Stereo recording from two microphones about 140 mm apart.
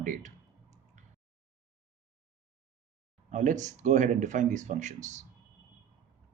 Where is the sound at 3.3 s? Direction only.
60° right (ahead or behind).